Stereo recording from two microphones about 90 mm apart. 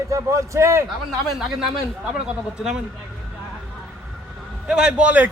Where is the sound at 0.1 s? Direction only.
35° right (ahead or behind).